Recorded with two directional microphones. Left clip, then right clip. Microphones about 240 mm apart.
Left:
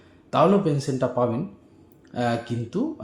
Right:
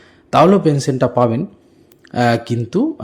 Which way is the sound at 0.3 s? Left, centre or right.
Right.